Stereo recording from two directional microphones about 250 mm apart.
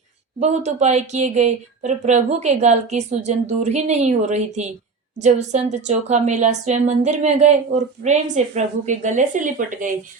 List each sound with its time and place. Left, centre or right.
0.3 s speech: right